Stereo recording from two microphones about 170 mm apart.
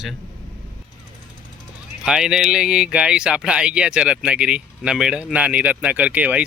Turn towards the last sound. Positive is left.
turn(degrees=-10)  # may be behind; listen again after turning